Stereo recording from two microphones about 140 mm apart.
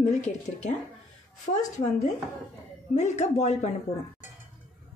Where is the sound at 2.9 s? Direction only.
55° left (ahead or behind).